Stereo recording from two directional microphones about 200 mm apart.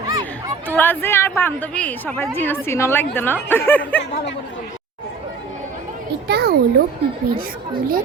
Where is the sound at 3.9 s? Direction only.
60° left (ahead or behind).